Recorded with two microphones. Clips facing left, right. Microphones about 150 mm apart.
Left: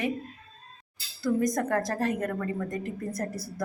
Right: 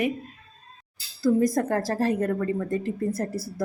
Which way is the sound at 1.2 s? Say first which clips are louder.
Right 5 dB; 30° right (ahead or behind).